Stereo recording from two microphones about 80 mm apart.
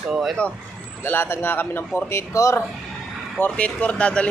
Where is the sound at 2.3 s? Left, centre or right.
Left.